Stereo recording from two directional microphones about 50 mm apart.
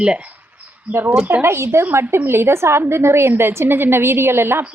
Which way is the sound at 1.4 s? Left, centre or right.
Right.